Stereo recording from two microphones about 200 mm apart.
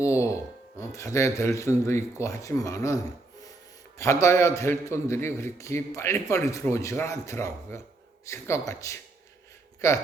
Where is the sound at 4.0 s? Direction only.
15° left (ahead or behind).